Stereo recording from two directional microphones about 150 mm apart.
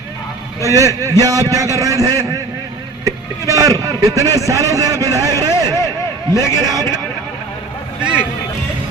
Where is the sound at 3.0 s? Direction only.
25° right (ahead or behind).